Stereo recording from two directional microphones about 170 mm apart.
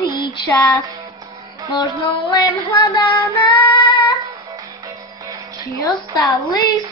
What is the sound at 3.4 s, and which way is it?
Female singing, 30° left (ahead or behind).